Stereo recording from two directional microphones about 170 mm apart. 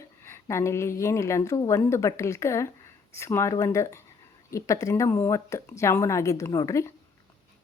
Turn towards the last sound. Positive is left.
turn(degrees=20)  # may be behind; listen again after turning